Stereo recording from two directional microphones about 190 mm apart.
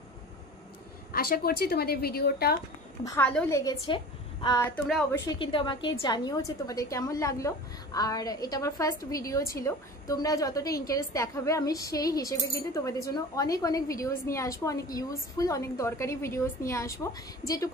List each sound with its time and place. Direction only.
1.1 s a woman's voice: 50° left (ahead or behind)
3.0 s a woman's voice: 15° left (ahead or behind)
3.8 s a woman's voice: 25° left (ahead or behind)